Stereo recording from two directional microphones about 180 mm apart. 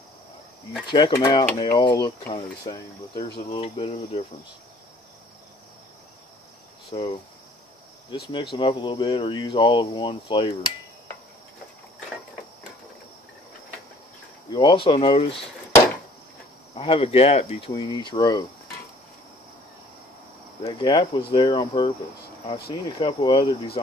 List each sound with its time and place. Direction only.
0.8 s speech: 25° left (ahead or behind)
6.9 s cricket: 30° left (ahead or behind)
8.1 s speech: 25° left (ahead or behind)
14.5 s speech: 25° left (ahead or behind)
16.7 s speech: 30° left (ahead or behind)
20.6 s speech: 25° left (ahead or behind)